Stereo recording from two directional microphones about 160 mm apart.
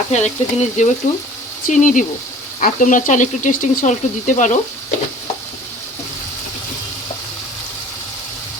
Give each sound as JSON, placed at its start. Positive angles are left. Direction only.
{"t": 0.1, "sound": "speech", "side_deg": 45}